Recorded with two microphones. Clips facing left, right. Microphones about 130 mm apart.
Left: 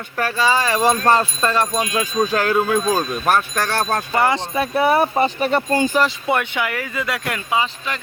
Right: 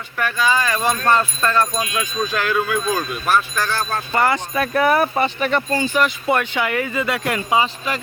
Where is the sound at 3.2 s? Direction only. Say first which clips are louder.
Right 1 dB; 50° left (ahead or behind).